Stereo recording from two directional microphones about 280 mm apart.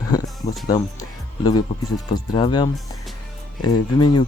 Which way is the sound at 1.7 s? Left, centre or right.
Left.